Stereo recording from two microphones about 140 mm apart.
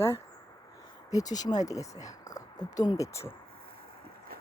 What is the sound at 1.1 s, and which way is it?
Speech, 25° left (ahead or behind).